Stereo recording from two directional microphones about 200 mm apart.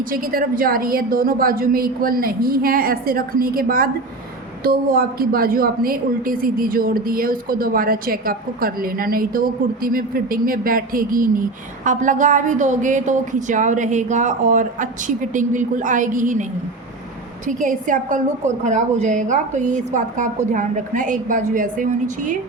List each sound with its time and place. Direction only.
0.1 s a woman's voice: 45° right (ahead or behind)